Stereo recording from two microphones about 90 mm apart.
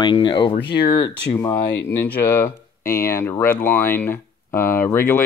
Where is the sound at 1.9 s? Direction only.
25° left (ahead or behind).